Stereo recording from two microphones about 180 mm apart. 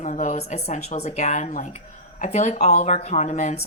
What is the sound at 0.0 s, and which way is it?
Speech, 45° left (ahead or behind).